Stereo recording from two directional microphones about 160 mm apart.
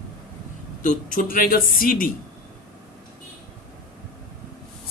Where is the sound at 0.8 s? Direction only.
55° left (ahead or behind).